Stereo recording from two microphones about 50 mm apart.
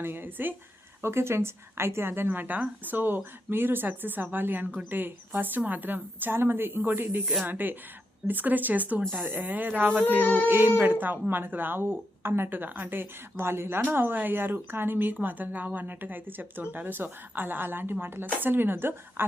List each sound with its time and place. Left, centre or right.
0.0 s speech: right
1.0 s a woman's voice: right
10.2 s a sound: left
10.4 s a woman's voice: right